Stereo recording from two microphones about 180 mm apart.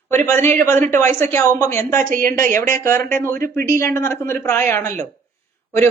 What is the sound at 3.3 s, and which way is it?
Speech, 55° right (ahead or behind).